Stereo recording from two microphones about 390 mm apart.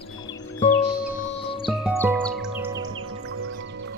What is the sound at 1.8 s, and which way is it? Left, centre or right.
Music, centre.